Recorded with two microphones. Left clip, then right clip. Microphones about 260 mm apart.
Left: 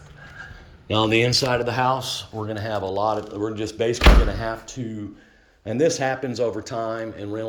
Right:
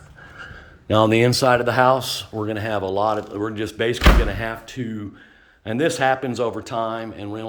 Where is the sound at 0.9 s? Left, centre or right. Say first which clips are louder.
Right 3 dB; right.